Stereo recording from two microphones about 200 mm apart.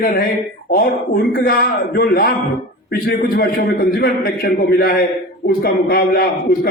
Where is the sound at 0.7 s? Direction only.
45° left (ahead or behind).